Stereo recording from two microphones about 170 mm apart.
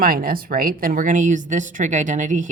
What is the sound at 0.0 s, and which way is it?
Speech, 60° right (ahead or behind).